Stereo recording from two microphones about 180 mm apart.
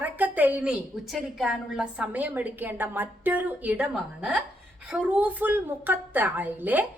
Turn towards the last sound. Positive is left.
turn(degrees=-10)  # may be behind; listen again after turning